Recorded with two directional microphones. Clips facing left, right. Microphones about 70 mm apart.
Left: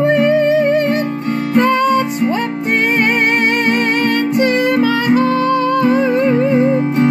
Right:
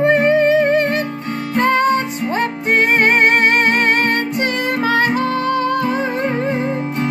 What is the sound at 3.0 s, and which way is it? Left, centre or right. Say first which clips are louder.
Music: right 1 dB; right.